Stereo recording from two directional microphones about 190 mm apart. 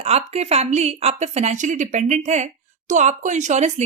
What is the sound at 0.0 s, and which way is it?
A woman's voice, 35° right (ahead or behind).